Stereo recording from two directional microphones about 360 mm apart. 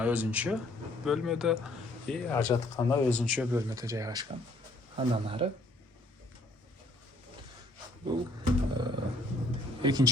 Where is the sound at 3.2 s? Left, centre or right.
Centre.